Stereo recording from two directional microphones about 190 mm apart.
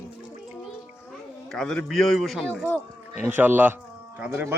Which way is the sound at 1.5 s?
5° left (ahead or behind).